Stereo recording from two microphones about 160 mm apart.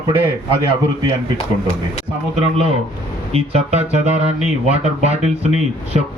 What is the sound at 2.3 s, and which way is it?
Speech, 40° right (ahead or behind).